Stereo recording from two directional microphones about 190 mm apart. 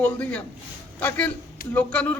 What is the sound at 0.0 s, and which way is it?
A man's voice, 5° left (ahead or behind).